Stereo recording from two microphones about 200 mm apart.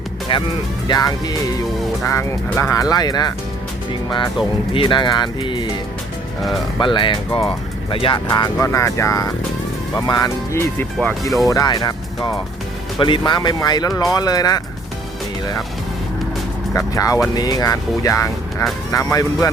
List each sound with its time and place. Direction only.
0.9 s speech: 20° left (ahead or behind)
4.7 s speech: 25° left (ahead or behind)
16.7 s speech: 15° left (ahead or behind)